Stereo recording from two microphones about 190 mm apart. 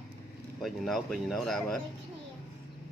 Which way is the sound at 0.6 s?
Centre (ahead or behind).